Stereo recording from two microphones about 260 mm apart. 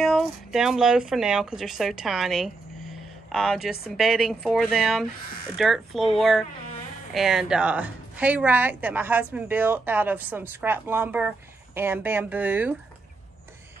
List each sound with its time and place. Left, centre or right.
0.0 s a woman's voice: centre